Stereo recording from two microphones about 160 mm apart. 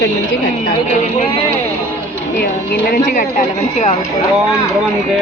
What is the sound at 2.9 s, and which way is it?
Speech, 50° left (ahead or behind).